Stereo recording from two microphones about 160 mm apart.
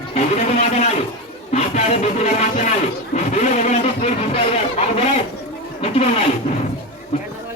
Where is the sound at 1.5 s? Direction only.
45° left (ahead or behind).